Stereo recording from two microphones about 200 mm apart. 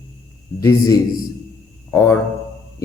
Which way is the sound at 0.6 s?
15° left (ahead or behind).